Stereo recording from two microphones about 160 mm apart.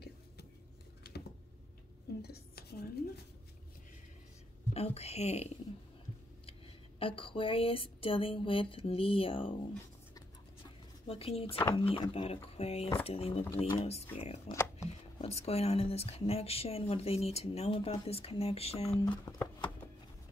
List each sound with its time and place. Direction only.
2.2 s dishes: 80° left
4.7 s speech: 40° left (ahead or behind)
7.0 s speech: 35° left (ahead or behind)
11.1 s speech: 35° left (ahead or behind)
14.5 s shuffling cards: 20° left (ahead or behind)
15.1 s speech: 40° left (ahead or behind)
19.4 s music: 10° left (ahead or behind)